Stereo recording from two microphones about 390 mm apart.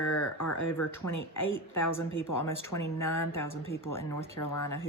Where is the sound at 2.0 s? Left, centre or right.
Left.